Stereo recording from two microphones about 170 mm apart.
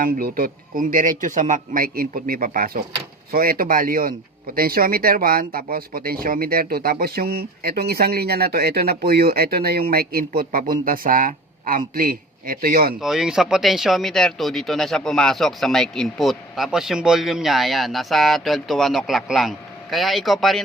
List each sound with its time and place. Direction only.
0.0 s a man's voice: 55° right (ahead or behind)
13.0 s speech: 5° right (ahead or behind)